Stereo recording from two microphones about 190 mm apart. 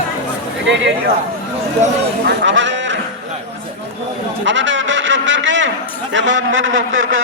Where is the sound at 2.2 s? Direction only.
70° right (ahead or behind).